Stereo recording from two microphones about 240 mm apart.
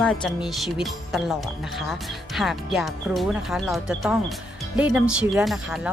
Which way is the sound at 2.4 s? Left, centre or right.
Centre.